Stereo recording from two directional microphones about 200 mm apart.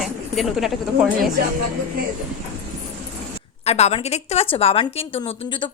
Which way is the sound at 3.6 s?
30° left (ahead or behind).